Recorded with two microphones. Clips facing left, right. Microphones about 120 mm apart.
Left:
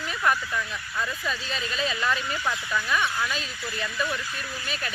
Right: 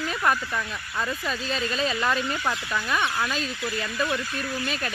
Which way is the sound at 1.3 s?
40° right (ahead or behind).